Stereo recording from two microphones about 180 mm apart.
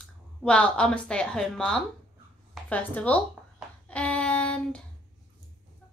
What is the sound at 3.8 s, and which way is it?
Child singing, 5° left (ahead or behind).